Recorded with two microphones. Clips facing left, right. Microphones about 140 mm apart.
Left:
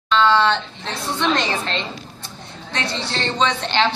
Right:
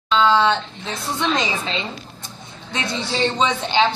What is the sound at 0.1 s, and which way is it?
A woman's voice, 10° right (ahead or behind).